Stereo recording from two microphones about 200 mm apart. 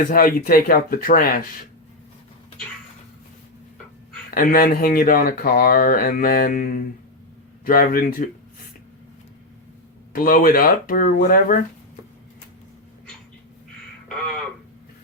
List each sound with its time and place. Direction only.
0.1 s speech: 45° left (ahead or behind)
4.4 s speech: 45° left (ahead or behind)
10.1 s speech: 45° left (ahead or behind)
14.1 s a sound: 5° left (ahead or behind)